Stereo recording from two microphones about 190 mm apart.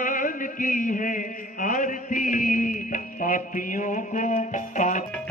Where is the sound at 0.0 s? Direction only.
45° left (ahead or behind).